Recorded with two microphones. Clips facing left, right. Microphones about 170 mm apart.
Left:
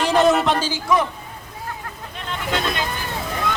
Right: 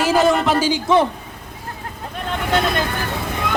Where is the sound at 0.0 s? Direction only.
5° right (ahead or behind).